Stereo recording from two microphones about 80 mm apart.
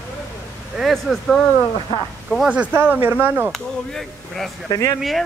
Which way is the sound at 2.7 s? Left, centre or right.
Right.